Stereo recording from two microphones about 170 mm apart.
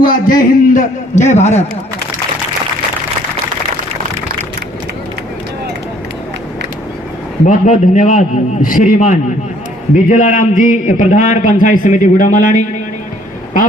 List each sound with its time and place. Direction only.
0.0 s a man's voice: 55° left (ahead or behind)
7.4 s a man's voice: 50° left (ahead or behind)